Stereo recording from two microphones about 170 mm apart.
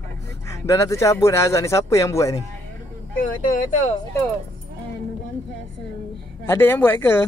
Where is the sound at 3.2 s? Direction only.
50° left (ahead or behind).